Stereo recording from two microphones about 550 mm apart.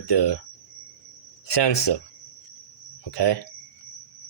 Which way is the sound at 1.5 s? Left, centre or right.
Left.